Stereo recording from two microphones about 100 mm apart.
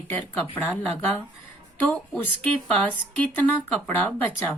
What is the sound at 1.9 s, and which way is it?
A woman's voice, 10° left (ahead or behind).